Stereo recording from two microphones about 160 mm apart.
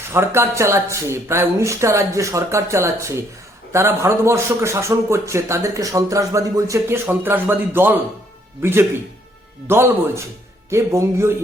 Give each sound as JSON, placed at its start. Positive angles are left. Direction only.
{"t": 0.1, "sound": "a man's voice", "side_deg": -15}